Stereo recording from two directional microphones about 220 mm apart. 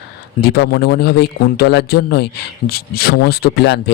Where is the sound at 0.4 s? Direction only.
45° left (ahead or behind).